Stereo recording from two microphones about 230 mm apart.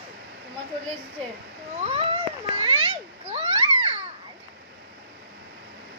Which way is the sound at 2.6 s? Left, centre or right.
Right.